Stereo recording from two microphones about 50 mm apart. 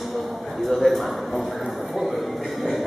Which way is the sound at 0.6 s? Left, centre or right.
Centre.